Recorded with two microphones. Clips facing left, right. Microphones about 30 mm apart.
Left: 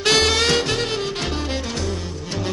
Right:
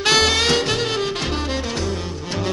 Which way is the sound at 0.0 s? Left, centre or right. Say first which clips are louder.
Right 1 dB; centre.